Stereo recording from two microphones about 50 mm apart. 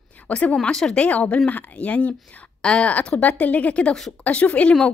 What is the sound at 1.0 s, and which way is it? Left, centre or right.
A woman's voice, left.